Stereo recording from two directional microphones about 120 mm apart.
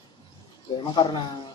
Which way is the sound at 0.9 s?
40° left (ahead or behind).